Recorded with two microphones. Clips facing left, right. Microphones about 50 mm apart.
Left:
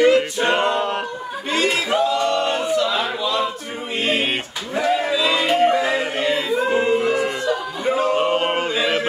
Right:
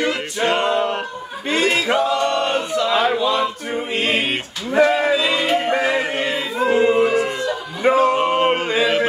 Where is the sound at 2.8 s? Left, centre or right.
Right.